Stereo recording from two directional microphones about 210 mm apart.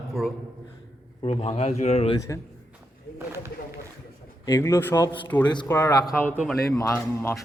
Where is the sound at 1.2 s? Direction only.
30° left (ahead or behind).